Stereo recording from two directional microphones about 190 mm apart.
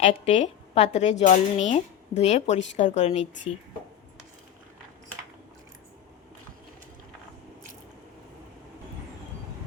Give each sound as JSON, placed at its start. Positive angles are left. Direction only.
{"t": 0.0, "sound": "a woman's voice", "side_deg": 35}